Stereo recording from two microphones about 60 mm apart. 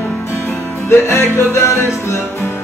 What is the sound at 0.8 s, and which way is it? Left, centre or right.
Music, left.